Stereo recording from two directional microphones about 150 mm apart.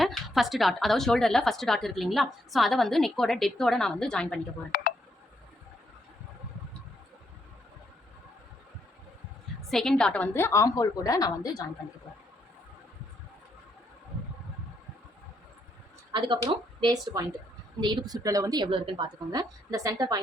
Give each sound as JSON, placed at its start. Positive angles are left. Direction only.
{"t": 0.0, "sound": "a woman's voice", "side_deg": 0}
{"t": 4.7, "sound": "speech", "side_deg": 90}
{"t": 9.6, "sound": "a woman's voice", "side_deg": 0}
{"t": 16.1, "sound": "a woman's voice", "side_deg": -30}